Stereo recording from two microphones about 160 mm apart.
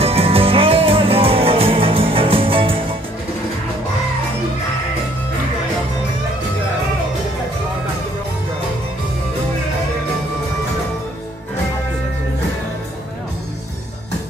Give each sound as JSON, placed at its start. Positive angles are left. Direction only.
{"t": 0.0, "sound": "music", "side_deg": -35}